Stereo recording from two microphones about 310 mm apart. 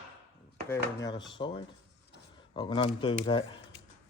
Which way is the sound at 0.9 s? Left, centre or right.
Centre.